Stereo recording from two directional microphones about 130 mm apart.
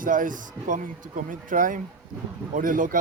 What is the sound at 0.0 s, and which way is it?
Speech, 90° right.